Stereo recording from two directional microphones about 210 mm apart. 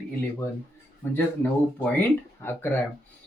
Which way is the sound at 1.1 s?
10° left (ahead or behind).